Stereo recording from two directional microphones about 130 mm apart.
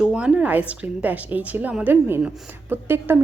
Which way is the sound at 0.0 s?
5° right (ahead or behind).